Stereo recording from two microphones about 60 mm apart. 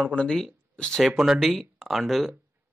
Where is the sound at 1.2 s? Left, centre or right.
Centre.